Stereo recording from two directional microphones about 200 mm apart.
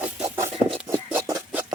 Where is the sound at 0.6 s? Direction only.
10° right (ahead or behind).